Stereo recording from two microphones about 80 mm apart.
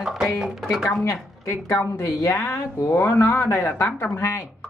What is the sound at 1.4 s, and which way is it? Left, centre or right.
Speech, left.